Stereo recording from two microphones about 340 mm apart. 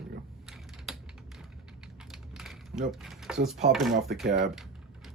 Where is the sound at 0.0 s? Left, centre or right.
Centre.